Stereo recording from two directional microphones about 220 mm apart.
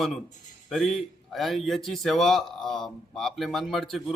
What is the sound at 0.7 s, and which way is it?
A man's voice, centre (ahead or behind).